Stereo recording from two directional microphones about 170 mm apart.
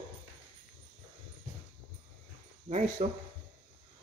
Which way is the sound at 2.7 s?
45° right (ahead or behind).